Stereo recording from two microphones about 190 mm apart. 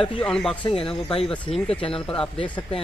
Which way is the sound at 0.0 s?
5° left (ahead or behind).